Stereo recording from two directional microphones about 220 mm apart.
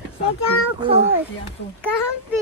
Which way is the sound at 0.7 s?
25° right (ahead or behind).